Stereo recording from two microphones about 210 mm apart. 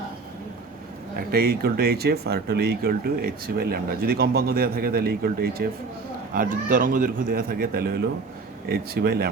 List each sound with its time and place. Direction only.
1.1 s speech: 45° right (ahead or behind)